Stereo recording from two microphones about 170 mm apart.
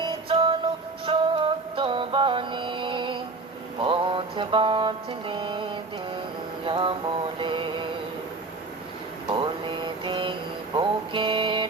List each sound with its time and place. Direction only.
0.0 s music: 30° right (ahead or behind)
3.8 s mantra: 30° right (ahead or behind)
9.3 s a sound: 30° right (ahead or behind)
10.8 s music: 30° right (ahead or behind)